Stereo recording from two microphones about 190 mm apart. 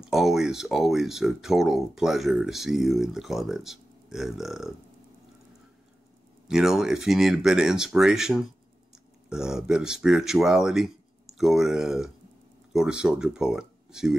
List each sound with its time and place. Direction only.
0.0 s speech: centre (ahead or behind)
6.4 s speech: 5° right (ahead or behind)